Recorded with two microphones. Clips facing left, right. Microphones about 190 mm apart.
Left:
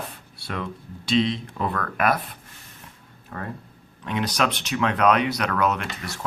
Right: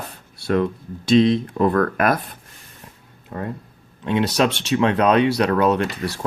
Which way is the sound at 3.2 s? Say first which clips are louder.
Right 5 dB; 20° right (ahead or behind).